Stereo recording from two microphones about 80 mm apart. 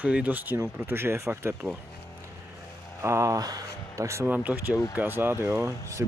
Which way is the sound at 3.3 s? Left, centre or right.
Right.